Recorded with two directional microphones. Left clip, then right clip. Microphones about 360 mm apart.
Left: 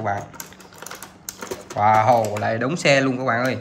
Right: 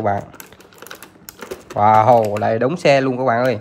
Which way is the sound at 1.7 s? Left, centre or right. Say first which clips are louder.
Right 4 dB; centre.